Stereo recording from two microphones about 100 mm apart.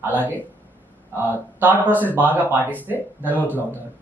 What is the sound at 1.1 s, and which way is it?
Speech, 20° right (ahead or behind).